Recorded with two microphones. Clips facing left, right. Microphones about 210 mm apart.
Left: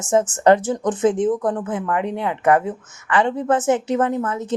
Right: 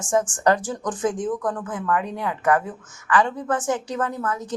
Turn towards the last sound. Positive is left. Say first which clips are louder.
# left 5 dB
turn(degrees=25)  # may be behind; listen again after turning